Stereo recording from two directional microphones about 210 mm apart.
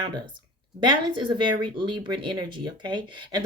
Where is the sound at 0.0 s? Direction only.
20° right (ahead or behind).